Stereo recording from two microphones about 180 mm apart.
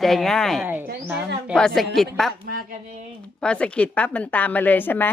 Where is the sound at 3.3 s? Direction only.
5° left (ahead or behind).